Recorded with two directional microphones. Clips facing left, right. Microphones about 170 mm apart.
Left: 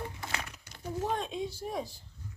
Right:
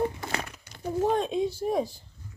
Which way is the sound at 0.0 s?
45° right (ahead or behind).